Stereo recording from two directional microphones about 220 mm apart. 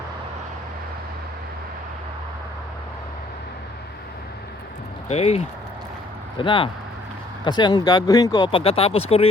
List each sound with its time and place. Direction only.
5.0 s speech: 30° left (ahead or behind)
6.4 s speech: 20° left (ahead or behind)